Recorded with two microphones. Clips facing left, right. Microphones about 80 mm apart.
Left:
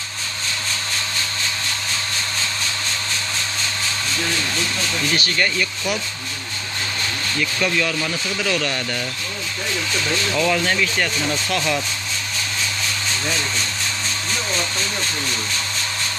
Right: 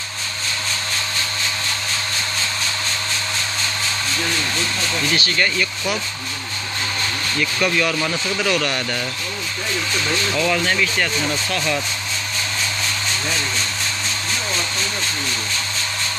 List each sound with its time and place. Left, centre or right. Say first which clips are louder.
7.6 s speech: right 2 dB; centre
10.3 s speech: left 1 dB; centre